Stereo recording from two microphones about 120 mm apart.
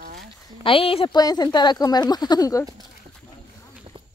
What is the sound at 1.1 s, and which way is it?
Speech, 35° left (ahead or behind).